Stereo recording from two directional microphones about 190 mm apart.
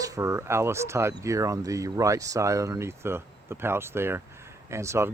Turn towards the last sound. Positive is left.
turn(degrees=-15)  # may be behind; listen again after turning